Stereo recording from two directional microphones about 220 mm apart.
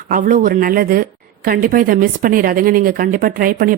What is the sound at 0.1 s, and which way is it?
Speech, 40° right (ahead or behind).